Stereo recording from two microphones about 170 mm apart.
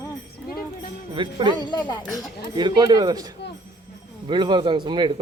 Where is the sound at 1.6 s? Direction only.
25° left (ahead or behind).